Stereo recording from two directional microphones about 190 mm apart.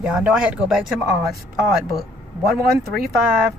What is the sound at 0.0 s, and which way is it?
Speech, 5° right (ahead or behind).